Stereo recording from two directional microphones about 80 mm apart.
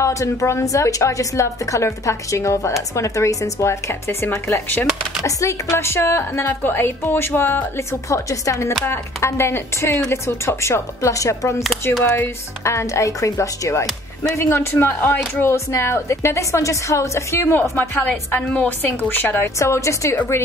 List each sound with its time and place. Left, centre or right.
0.0 s a woman's voice: left
5.2 s speech: left
8.1 s a woman's voice: left
12.6 s a woman's voice: left
19.6 s a woman's voice: left